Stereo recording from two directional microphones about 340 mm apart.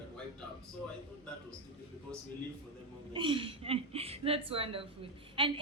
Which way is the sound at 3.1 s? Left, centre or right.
Centre.